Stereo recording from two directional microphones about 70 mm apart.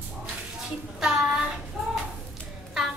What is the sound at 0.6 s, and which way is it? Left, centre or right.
Child singing, centre.